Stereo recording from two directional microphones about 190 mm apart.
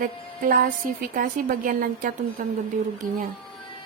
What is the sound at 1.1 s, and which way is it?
A woman's voice, 45° right (ahead or behind).